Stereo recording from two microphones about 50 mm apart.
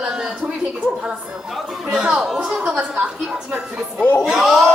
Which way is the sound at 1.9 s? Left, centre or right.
Centre.